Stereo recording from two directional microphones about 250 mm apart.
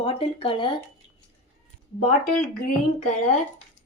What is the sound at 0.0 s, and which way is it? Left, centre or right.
Speech, left.